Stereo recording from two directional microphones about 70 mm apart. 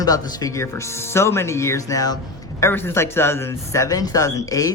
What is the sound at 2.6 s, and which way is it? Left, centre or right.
Speech, left.